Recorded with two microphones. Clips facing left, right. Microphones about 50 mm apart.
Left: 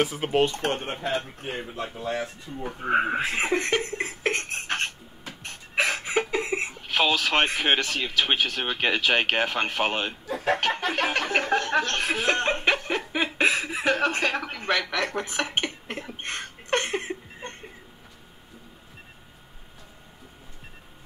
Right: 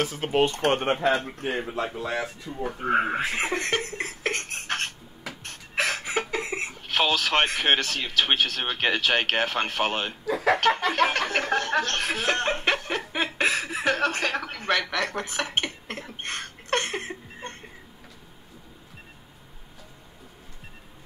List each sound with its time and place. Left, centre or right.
0.0 s snicker: centre
0.4 s speech: centre
0.7 s speech: right
1.4 s speech: right
2.6 s speech: centre
10.9 s snicker: centre
16.3 s a sound: centre